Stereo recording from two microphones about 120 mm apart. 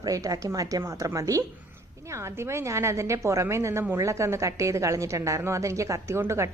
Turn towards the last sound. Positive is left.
turn(degrees=-25)  # may be behind; listen again after turning